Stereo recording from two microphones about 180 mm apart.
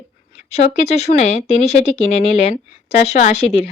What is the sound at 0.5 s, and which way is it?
Speech, 35° left (ahead or behind).